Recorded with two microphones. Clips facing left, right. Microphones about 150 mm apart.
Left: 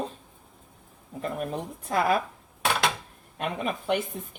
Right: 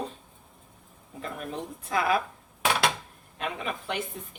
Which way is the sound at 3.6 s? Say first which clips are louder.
Left 8 dB; 50° left (ahead or behind).